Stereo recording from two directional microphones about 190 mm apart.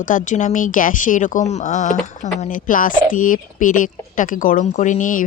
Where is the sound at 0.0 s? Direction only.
45° left (ahead or behind).